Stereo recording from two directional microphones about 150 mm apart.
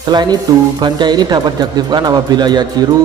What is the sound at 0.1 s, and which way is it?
Speech, 30° right (ahead or behind).